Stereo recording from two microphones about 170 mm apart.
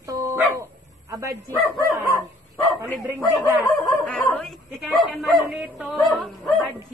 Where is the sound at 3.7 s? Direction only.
10° left (ahead or behind).